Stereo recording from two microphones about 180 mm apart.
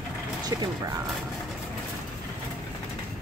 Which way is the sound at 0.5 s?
20° right (ahead or behind).